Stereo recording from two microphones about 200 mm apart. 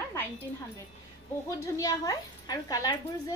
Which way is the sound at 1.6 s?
20° left (ahead or behind).